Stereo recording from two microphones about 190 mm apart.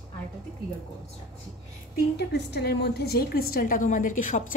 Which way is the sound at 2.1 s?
60° left (ahead or behind).